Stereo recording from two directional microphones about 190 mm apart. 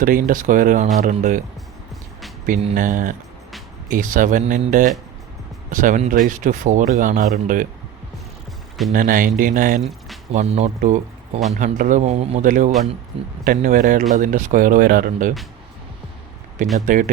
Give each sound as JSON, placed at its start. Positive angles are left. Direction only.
{"t": 0.0, "sound": "speech", "side_deg": -45}
{"t": 2.7, "sound": "speech", "side_deg": -45}
{"t": 8.9, "sound": "speech", "side_deg": -45}
{"t": 10.3, "sound": "speech", "side_deg": -35}
{"t": 16.7, "sound": "speech", "side_deg": -45}